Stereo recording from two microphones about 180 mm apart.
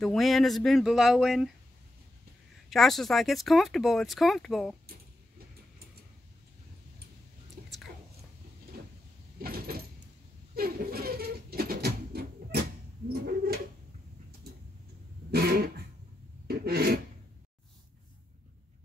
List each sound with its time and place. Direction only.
0.0 s speech: centre (ahead or behind)
2.7 s speech: centre (ahead or behind)
7.6 s whispering: 55° right (ahead or behind)
9.4 s sliding door: 55° right (ahead or behind)
10.5 s a sound: 55° right (ahead or behind)
13.1 s bird: 60° right (ahead or behind)
15.3 s dog: 60° right (ahead or behind)
16.4 s a sound: 60° right (ahead or behind)